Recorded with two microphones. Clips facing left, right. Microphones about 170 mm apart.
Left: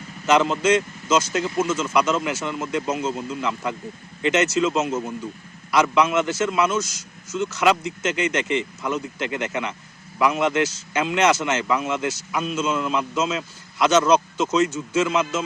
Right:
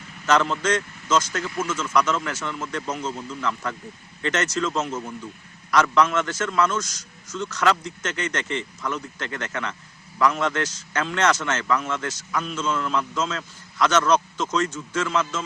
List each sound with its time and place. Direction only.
0.3 s a man's voice: 15° left (ahead or behind)
1.8 s a man's voice: 10° left (ahead or behind)